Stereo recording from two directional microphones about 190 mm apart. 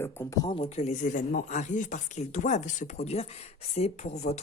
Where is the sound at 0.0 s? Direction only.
10° left (ahead or behind).